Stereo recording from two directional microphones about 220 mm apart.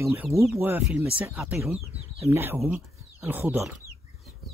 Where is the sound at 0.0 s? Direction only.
10° right (ahead or behind).